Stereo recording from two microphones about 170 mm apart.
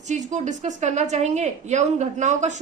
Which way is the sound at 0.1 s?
45° right (ahead or behind).